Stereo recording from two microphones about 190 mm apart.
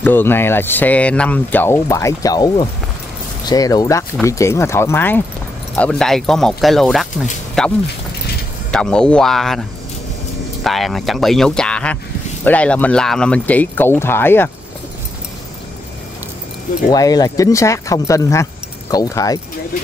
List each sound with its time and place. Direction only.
0.0 s speech: 10° left (ahead or behind)
8.7 s speech: 5° left (ahead or behind)
16.9 s speech: 20° left (ahead or behind)